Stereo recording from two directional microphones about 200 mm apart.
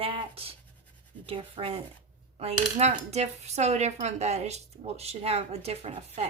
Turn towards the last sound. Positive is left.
turn(degrees=-30)  # may be behind; listen again after turning